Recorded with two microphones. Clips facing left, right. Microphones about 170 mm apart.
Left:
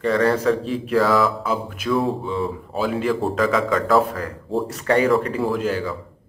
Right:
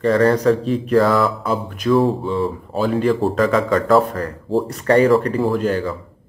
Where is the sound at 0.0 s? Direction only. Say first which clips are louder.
Right 4 dB; 40° right (ahead or behind).